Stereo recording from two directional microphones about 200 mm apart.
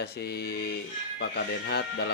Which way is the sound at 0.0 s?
55° left (ahead or behind).